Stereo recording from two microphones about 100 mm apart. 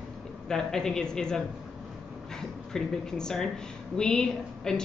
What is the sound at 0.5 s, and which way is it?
Speech, 5° left (ahead or behind).